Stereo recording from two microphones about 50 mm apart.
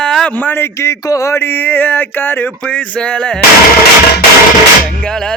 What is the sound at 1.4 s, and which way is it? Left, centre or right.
Speech, left.